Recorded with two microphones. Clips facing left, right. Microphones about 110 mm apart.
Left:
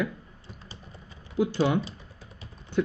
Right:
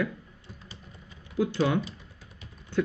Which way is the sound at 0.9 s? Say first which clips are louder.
Left 2 dB; 30° left (ahead or behind).